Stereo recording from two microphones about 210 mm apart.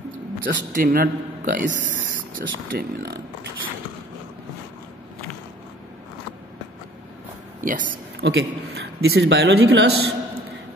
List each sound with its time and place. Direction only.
0.4 s a man's voice: 40° right (ahead or behind)
7.6 s a man's voice: 40° right (ahead or behind)
8.2 s speech: 55° right (ahead or behind)